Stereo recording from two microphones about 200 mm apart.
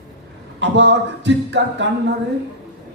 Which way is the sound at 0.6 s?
60° right (ahead or behind).